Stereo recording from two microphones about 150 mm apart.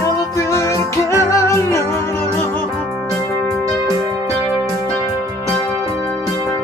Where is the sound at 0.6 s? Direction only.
20° left (ahead or behind).